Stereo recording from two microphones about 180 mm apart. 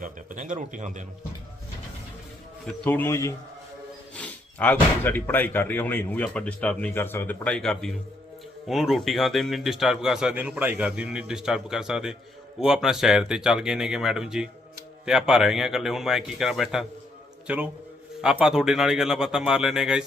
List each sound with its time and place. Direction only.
0.0 s a man's voice: 45° right (ahead or behind)
2.6 s a man's voice: 10° left (ahead or behind)